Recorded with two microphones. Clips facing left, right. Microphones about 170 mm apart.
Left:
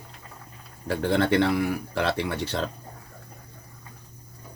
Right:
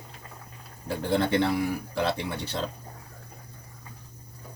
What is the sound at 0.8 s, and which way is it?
A man's voice, 75° left (ahead or behind).